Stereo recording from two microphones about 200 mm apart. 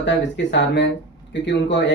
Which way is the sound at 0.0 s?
65° left (ahead or behind).